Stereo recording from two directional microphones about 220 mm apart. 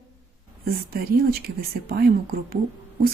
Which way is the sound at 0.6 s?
40° right (ahead or behind).